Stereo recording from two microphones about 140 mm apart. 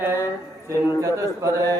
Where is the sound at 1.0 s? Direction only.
20° right (ahead or behind).